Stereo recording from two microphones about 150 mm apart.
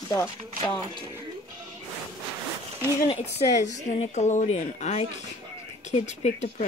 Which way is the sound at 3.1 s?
45° left (ahead or behind).